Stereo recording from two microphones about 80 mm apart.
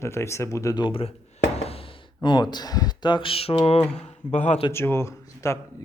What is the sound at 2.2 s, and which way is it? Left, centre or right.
Speech, left.